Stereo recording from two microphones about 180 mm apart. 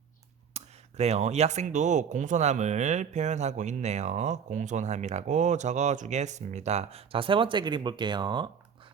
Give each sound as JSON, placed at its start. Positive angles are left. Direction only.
{"t": 0.5, "sound": "speech", "side_deg": -35}